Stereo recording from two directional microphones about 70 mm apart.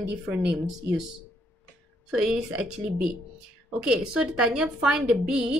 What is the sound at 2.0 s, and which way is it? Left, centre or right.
Speech, centre.